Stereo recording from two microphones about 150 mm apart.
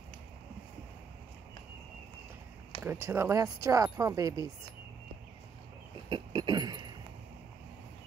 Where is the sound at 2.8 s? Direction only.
15° right (ahead or behind).